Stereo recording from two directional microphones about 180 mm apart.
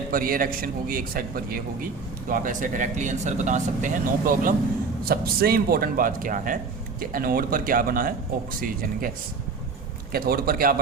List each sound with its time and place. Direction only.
0.1 s speech: 50° right (ahead or behind)